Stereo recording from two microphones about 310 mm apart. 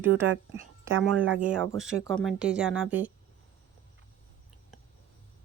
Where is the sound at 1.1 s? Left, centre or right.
Right.